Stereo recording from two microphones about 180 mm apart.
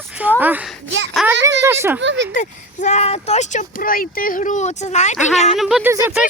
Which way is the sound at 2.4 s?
40° left (ahead or behind).